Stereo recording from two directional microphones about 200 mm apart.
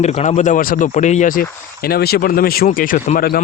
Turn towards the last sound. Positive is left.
turn(degrees=45)  # may be behind; listen again after turning